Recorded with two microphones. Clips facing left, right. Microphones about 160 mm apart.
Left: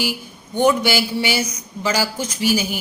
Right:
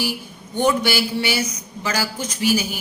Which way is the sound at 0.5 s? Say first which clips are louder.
Left 2 dB; 15° left (ahead or behind).